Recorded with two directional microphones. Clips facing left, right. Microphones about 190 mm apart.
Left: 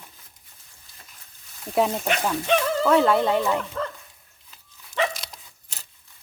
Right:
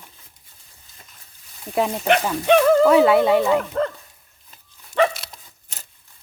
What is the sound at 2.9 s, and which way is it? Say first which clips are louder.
Speech: right 5 dB; 5° right (ahead or behind).